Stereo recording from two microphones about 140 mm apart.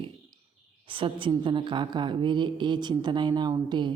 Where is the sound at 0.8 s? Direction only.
40° right (ahead or behind).